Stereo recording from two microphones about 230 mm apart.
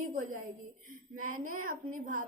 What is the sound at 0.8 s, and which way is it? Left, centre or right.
Speech, right.